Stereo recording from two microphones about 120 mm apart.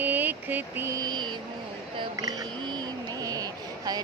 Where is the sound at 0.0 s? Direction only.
15° right (ahead or behind).